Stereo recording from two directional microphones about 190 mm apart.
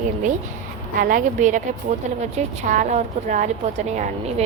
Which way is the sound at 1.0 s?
45° right (ahead or behind).